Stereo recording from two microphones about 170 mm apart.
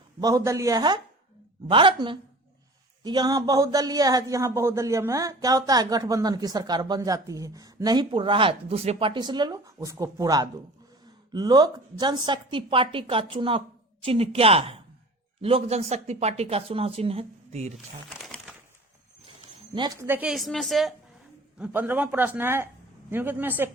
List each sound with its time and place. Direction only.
0.2 s a man's voice: 20° right (ahead or behind); by 17.7 s 40° right (ahead or behind)
18.1 s a sound: centre (ahead or behind)
20.0 s a woman's voice: 10° right (ahead or behind)
21.6 s speech: 10° right (ahead or behind)